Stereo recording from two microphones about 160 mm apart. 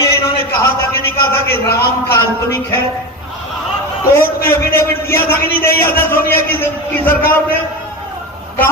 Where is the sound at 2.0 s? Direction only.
15° left (ahead or behind).